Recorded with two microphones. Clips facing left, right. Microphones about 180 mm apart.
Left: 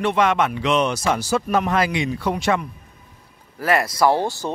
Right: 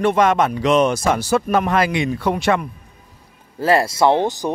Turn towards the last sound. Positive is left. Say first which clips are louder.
# right 3 dB
turn(degrees=-20)  # may be behind; listen again after turning